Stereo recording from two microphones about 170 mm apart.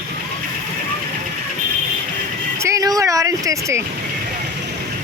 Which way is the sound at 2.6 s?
20° right (ahead or behind).